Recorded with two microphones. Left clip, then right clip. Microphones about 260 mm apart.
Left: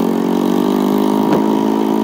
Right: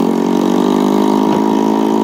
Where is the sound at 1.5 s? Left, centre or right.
Centre.